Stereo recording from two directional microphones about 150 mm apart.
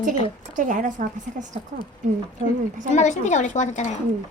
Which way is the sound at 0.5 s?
55° right (ahead or behind).